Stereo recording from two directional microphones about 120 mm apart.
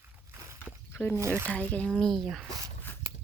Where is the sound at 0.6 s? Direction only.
15° left (ahead or behind).